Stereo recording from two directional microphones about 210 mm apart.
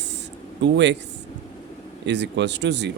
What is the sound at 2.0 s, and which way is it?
Speech, 55° right (ahead or behind).